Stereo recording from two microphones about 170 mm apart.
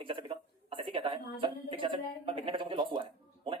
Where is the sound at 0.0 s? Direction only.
30° right (ahead or behind).